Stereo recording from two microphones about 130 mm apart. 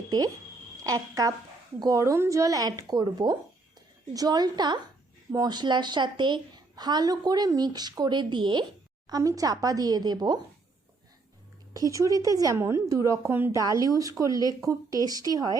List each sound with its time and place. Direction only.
0.9 s a woman's voice: 25° right (ahead or behind)
9.0 s speech: 25° right (ahead or behind)
11.7 s speech: 25° right (ahead or behind)